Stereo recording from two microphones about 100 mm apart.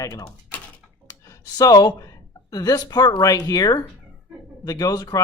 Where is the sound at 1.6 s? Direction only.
40° left (ahead or behind).